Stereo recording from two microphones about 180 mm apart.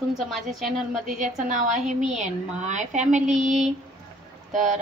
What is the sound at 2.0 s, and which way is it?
Speech, 40° right (ahead or behind).